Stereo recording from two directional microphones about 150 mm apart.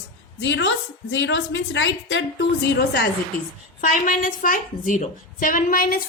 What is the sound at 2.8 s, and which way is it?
Speech, 90° left.